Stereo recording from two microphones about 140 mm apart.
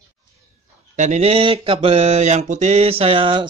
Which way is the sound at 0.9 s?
55° right (ahead or behind).